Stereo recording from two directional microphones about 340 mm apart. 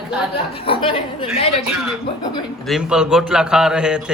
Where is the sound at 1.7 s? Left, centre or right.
Centre.